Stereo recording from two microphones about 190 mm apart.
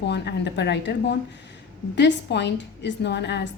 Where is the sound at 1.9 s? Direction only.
65° left (ahead or behind).